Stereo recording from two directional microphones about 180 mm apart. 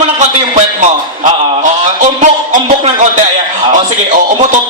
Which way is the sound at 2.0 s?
45° right (ahead or behind).